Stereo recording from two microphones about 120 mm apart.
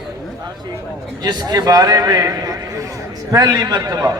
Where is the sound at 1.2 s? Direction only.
35° right (ahead or behind).